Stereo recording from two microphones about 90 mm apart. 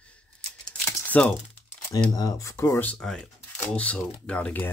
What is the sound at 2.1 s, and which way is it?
Speech, 45° left (ahead or behind).